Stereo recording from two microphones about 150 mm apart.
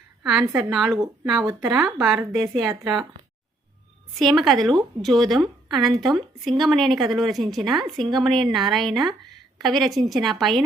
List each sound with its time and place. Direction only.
0.2 s a woman's voice: centre (ahead or behind)
0.4 s a woman's voice: 20° right (ahead or behind)
0.7 s a woman's voice: centre (ahead or behind)
4.2 s a woman's voice: centre (ahead or behind)